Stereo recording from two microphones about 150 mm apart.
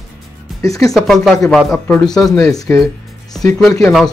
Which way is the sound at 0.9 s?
Centre (ahead or behind).